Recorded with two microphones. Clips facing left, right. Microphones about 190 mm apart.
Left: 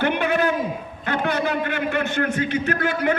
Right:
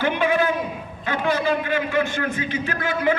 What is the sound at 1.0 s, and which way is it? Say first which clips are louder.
A man's voice: right 1 dB; 60° left (ahead or behind).